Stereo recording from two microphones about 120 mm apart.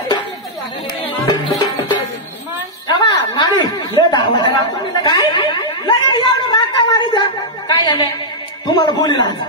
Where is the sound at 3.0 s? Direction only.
40° left (ahead or behind).